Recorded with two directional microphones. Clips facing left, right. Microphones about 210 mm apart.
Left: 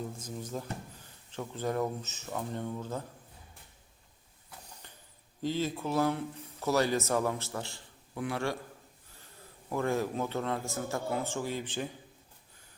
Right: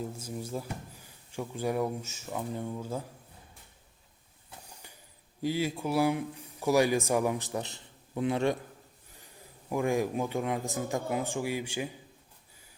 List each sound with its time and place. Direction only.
0.2 s speech: 10° right (ahead or behind)
5.4 s speech: 10° right (ahead or behind)